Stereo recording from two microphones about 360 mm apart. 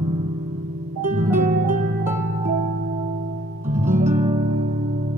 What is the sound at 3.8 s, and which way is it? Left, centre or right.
Music, right.